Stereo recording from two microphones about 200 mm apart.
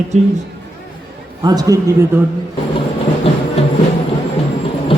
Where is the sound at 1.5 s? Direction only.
20° right (ahead or behind).